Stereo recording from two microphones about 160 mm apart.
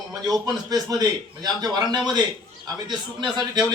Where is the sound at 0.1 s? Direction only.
25° right (ahead or behind).